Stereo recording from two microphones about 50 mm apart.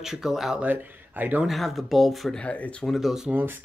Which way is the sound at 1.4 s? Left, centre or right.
Centre.